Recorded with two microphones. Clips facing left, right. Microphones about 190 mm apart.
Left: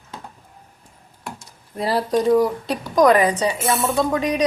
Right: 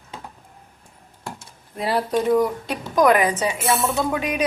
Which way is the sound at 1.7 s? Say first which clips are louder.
Left 2 dB; centre (ahead or behind).